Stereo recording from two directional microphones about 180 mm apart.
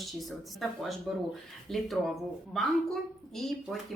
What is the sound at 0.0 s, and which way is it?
A woman's voice, centre (ahead or behind).